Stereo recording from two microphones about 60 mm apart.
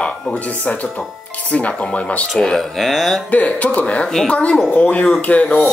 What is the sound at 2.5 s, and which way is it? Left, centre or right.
Speech, centre.